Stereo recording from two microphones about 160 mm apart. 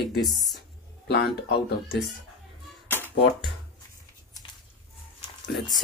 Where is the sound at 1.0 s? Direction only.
85° left.